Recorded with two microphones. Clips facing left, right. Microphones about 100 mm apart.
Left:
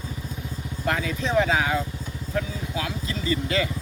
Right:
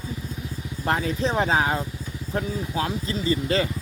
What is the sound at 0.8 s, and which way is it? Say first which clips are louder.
Speech: right 2 dB; 35° right (ahead or behind).